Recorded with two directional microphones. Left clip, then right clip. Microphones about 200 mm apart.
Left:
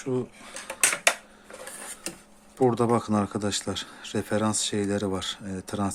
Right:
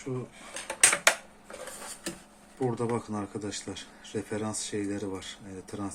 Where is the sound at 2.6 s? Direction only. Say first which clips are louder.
Left 8 dB; 55° left (ahead or behind).